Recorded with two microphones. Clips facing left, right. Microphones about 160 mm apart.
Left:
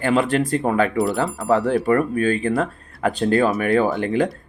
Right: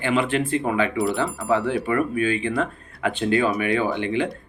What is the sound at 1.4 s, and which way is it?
Speech, 40° left (ahead or behind).